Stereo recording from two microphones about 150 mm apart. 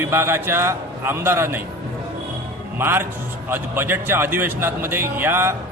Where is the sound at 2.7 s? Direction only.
15° right (ahead or behind).